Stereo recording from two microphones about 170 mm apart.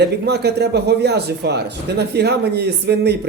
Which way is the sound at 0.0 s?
80° right.